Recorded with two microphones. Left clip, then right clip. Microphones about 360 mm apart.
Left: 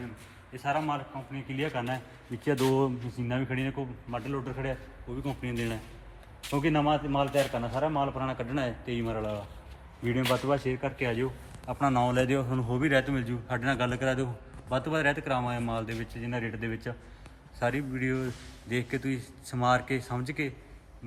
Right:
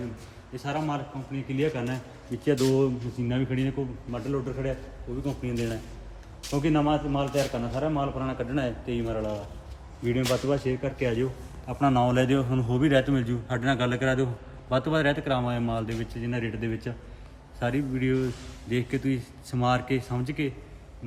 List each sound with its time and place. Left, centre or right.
0.5 s a man's voice: centre
17.9 s a man's voice: centre